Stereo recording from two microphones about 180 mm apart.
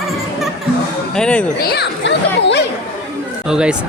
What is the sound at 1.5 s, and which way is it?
Speech, 60° left (ahead or behind).